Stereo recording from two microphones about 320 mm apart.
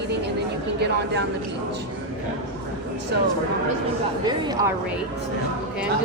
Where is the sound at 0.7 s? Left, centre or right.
Right.